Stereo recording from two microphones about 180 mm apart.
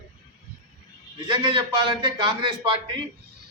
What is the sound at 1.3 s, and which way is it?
A man's voice, 25° right (ahead or behind).